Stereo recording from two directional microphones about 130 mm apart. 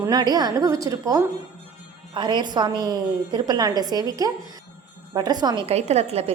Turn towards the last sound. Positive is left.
turn(degrees=-55)  # may be behind; listen again after turning